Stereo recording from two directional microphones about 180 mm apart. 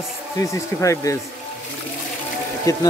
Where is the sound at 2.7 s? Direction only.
20° left (ahead or behind).